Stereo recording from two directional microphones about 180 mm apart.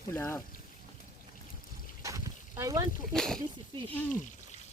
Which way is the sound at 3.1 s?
Centre (ahead or behind).